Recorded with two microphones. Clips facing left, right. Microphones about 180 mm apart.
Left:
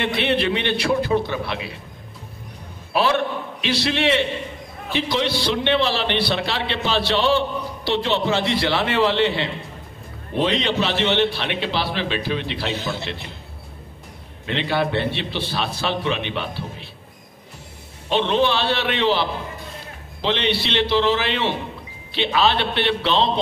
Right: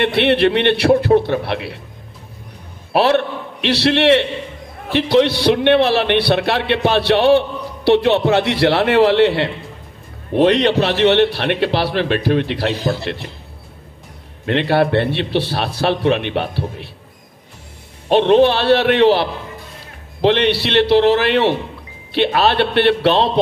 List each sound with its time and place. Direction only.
0.0 s a man's voice: 65° right (ahead or behind)
2.9 s a man's voice: 65° right (ahead or behind)
14.4 s a man's voice: 60° right (ahead or behind)
18.0 s a man's voice: 55° right (ahead or behind)